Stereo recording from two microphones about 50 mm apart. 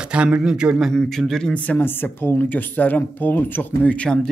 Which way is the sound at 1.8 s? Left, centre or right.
Left.